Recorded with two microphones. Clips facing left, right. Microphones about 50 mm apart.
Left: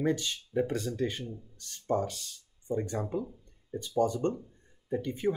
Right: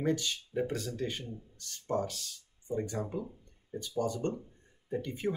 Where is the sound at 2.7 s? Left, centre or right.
Left.